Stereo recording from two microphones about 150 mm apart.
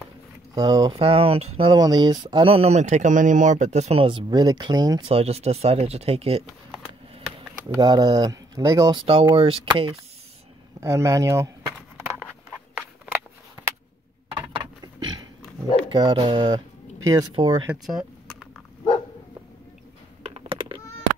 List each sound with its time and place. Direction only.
0.6 s speech: 25° right (ahead or behind)
0.9 s speech: 40° right (ahead or behind)
5.0 s speech: 40° right (ahead or behind)
6.4 s a sound: centre (ahead or behind)
7.7 s speech: 25° right (ahead or behind)
8.9 s speech: 35° right (ahead or behind)
10.8 s speech: 20° right (ahead or behind)
14.5 s a sound: 30° right (ahead or behind)
15.9 s speech: 30° right (ahead or behind)
17.6 s speech: centre (ahead or behind)
20.2 s typing: 40° right (ahead or behind)